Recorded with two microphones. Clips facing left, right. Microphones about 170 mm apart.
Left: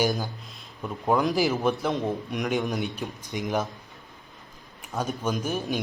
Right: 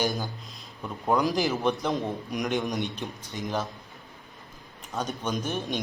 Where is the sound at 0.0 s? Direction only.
Centre (ahead or behind).